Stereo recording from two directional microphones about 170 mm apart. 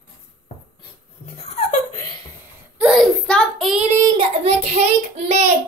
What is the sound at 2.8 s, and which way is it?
Child singing, centre (ahead or behind).